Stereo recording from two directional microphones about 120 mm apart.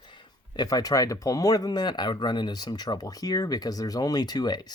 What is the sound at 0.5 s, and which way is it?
Speech, 30° left (ahead or behind).